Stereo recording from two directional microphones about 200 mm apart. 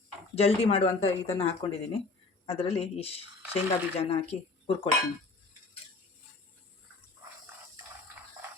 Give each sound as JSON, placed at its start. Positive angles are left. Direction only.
{"t": 0.3, "sound": "speech", "side_deg": 30}